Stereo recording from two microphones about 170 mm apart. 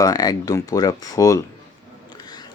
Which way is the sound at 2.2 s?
25° left (ahead or behind).